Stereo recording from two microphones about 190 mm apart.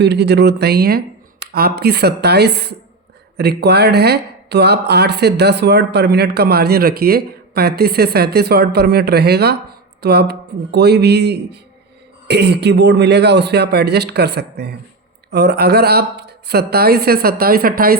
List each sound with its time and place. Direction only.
0.0 s speech: 60° right (ahead or behind)